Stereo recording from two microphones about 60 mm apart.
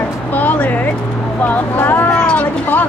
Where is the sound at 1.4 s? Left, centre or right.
Left.